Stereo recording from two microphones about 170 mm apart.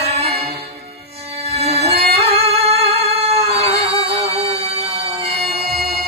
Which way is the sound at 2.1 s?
35° right (ahead or behind).